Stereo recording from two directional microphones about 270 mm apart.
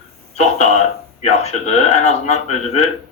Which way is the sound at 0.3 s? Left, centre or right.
Left.